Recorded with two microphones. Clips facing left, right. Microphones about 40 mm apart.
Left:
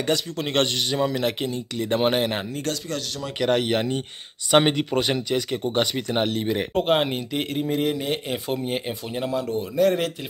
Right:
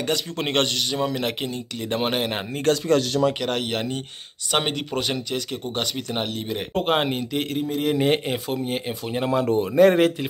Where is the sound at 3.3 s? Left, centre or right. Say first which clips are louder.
Left 4 dB; centre.